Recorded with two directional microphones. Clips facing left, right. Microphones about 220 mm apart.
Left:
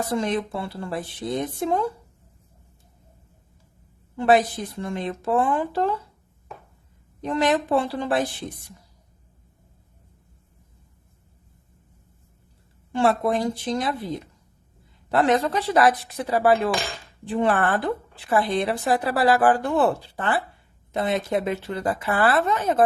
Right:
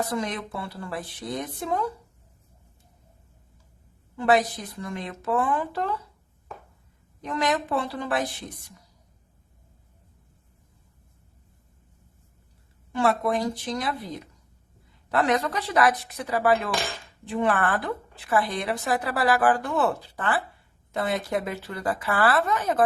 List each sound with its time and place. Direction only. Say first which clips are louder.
0.1 s speech: left 5 dB; 30° left (ahead or behind)
4.2 s speech: left 3 dB; 25° left (ahead or behind)
7.2 s speech: left 4 dB; 30° left (ahead or behind)
12.9 s speech: left 3 dB; 30° left (ahead or behind)
15.1 s speech: left 4 dB; 30° left (ahead or behind)